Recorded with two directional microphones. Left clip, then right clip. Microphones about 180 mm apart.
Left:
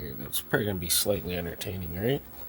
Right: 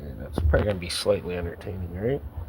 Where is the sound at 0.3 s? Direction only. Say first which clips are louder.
Right 4 dB; 25° left (ahead or behind).